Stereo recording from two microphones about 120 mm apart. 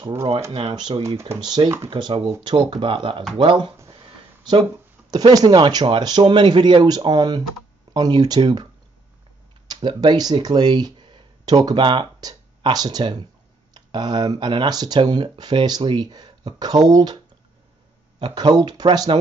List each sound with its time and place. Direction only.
0.5 s speech: 45° right (ahead or behind)
3.9 s a sound: 45° right (ahead or behind)
5.1 s speech: 35° right (ahead or behind)
9.7 s speech: 35° right (ahead or behind)
18.2 s speech: 35° right (ahead or behind)